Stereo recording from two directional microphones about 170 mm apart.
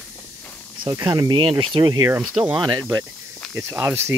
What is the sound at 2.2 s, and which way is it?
Speech, centre (ahead or behind).